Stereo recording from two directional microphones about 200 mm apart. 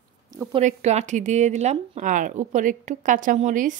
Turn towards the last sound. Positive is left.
turn(degrees=-40)  # may be behind; listen again after turning